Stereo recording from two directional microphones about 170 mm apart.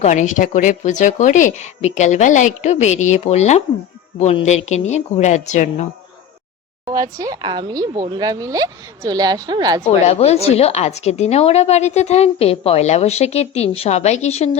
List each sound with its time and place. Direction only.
0.0 s speech: 45° left (ahead or behind)
6.8 s speech: 20° right (ahead or behind)
10.1 s a woman's voice: 40° left (ahead or behind)